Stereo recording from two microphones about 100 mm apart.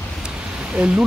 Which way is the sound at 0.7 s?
10° right (ahead or behind).